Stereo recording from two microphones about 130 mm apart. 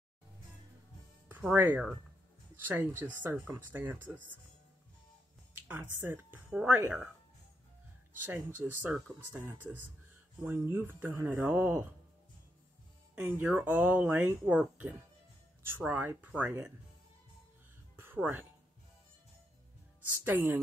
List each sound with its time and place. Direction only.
1.5 s speech: 10° right (ahead or behind)
5.5 s speech: 15° right (ahead or behind)
8.6 s speech: 5° right (ahead or behind)
9.4 s speech: 15° right (ahead or behind)
13.1 s speech: 15° right (ahead or behind)
17.9 s music: 15° right (ahead or behind)
20.0 s speech: 15° right (ahead or behind)